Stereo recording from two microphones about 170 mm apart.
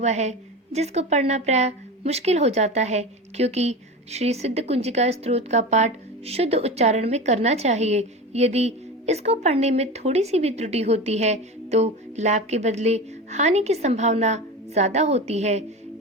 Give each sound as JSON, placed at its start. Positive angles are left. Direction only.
{"t": 0.0, "sound": "a woman's voice", "side_deg": -40}